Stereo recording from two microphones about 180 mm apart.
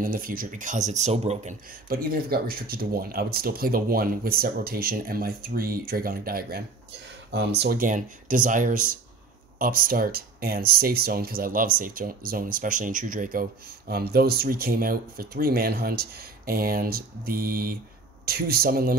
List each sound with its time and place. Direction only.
0.0 s speech: 50° right (ahead or behind)
1.9 s speech: 55° right (ahead or behind)